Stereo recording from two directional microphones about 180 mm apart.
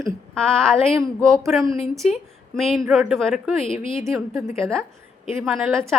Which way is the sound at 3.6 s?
30° left (ahead or behind).